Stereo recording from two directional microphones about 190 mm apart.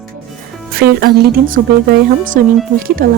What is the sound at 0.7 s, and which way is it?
Speech, 50° right (ahead or behind).